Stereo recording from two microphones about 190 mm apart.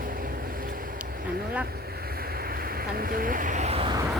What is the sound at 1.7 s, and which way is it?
Boat, 55° right (ahead or behind).